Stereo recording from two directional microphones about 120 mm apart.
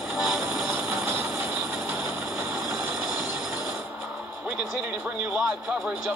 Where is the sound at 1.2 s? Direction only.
5° right (ahead or behind).